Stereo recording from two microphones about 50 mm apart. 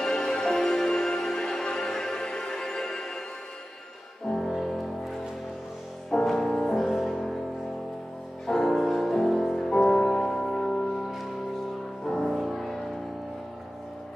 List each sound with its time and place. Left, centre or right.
0.0 s music: centre
4.3 s music: centre
8.5 s music: centre
12.0 s music: centre